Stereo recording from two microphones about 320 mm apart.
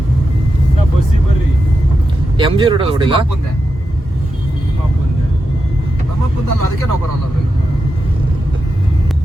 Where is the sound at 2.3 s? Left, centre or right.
Centre.